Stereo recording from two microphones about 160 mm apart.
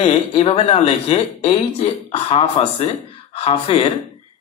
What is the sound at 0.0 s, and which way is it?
Speech, 35° left (ahead or behind).